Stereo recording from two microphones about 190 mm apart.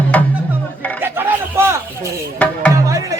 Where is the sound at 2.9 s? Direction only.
20° right (ahead or behind).